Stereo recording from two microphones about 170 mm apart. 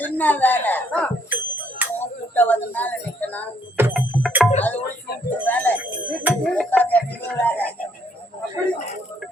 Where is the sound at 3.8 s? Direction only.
15° right (ahead or behind).